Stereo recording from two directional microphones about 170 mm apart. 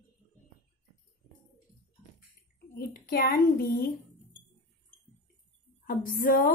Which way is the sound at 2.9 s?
60° left (ahead or behind).